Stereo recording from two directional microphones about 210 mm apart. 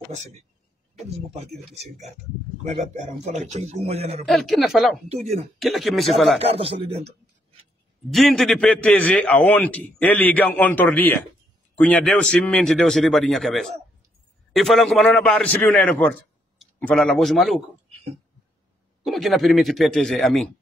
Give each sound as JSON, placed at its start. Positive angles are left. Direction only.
{"t": 0.9, "sound": "a man's voice", "side_deg": -30}
{"t": 2.6, "sound": "a man's voice", "side_deg": -35}
{"t": 4.3, "sound": "speech", "side_deg": 0}
{"t": 6.4, "sound": "speech", "side_deg": -25}
{"t": 8.1, "sound": "a man's voice", "side_deg": 0}
{"t": 19.0, "sound": "speech", "side_deg": 0}